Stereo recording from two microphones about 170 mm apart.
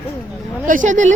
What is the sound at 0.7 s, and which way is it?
Speech, 50° right (ahead or behind).